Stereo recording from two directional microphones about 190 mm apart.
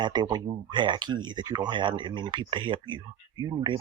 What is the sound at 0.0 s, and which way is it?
Speech, 25° right (ahead or behind).